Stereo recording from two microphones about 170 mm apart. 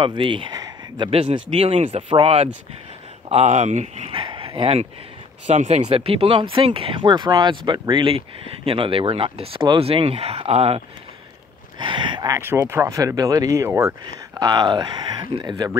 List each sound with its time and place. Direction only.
0.0 s speech: 30° right (ahead or behind)
11.8 s speech: 30° right (ahead or behind)